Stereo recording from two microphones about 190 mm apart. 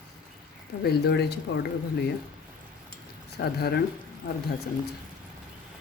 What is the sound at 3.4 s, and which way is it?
Speech, 60° left (ahead or behind).